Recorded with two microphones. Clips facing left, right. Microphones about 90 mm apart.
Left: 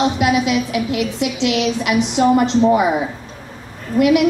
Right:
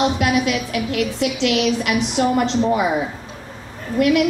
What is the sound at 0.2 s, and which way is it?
A woman's voice, 20° left (ahead or behind).